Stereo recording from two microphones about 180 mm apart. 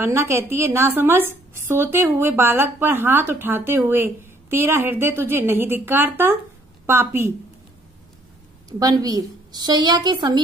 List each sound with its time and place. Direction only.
0.0 s a woman's voice: 15° right (ahead or behind)
8.6 s a woman's voice: 20° right (ahead or behind)